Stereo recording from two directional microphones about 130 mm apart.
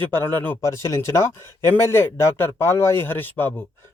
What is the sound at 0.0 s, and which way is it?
Speech, 15° left (ahead or behind).